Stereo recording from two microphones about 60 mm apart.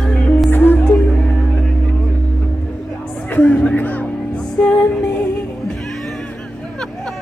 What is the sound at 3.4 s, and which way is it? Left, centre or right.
Music, left.